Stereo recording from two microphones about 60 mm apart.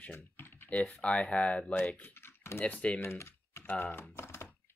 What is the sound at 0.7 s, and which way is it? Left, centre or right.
Speech, left.